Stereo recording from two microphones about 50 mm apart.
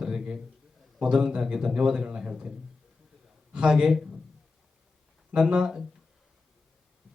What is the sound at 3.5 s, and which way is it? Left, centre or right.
Speech, centre.